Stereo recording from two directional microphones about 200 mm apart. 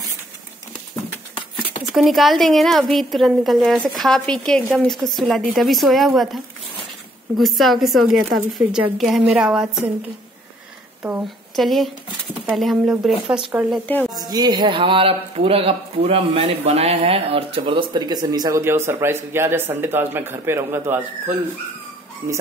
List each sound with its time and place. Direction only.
1.9 s a woman's voice: centre (ahead or behind)
11.0 s speech: 10° right (ahead or behind)
11.5 s a woman's voice: centre (ahead or behind)
14.1 s speech: 20° right (ahead or behind)